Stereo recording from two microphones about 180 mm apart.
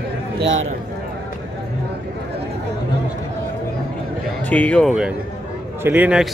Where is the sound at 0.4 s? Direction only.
90° right.